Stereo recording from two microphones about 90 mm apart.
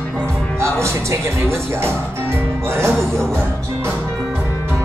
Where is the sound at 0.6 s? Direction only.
30° right (ahead or behind).